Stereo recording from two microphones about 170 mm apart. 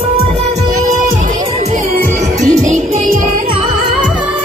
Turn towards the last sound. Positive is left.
turn(degrees=-45)  # may be behind; listen again after turning